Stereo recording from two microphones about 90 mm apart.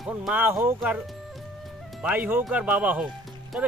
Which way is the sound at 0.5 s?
25° right (ahead or behind).